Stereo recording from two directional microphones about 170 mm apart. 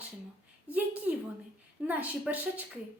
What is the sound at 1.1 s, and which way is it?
Speech, 10° right (ahead or behind).